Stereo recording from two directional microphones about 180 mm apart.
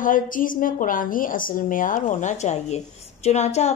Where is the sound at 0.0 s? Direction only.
50° left (ahead or behind).